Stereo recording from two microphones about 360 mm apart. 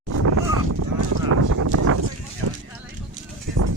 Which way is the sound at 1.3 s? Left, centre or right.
Right.